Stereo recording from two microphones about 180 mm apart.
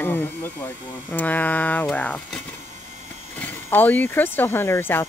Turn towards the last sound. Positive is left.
turn(degrees=10)  # may be behind; listen again after turning